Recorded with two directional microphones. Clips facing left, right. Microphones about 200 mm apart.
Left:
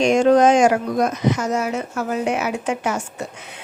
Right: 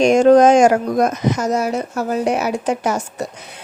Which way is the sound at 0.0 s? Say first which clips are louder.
Right 4 dB; 45° right (ahead or behind).